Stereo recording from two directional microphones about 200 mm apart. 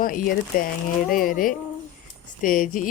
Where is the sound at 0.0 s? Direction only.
45° left (ahead or behind).